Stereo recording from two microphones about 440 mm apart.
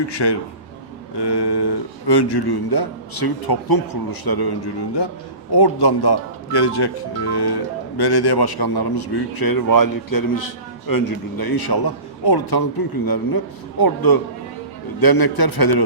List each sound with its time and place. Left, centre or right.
0.1 s speech: left